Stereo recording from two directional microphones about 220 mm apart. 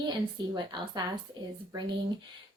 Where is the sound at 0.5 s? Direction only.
20° right (ahead or behind).